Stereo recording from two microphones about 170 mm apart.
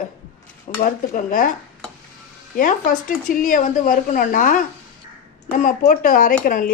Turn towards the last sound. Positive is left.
turn(degrees=55)  # may be behind; listen again after turning